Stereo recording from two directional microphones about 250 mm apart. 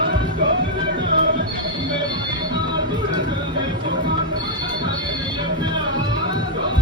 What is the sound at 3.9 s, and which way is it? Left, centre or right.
Music, right.